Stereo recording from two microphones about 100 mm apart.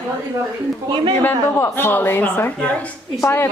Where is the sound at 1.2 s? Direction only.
20° left (ahead or behind).